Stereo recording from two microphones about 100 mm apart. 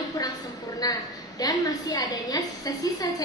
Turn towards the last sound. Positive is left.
turn(degrees=40)  # may be behind; listen again after turning